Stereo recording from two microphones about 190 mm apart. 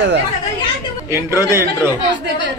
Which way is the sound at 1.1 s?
15° right (ahead or behind).